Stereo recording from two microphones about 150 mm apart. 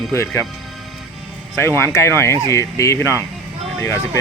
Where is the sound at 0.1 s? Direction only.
20° left (ahead or behind).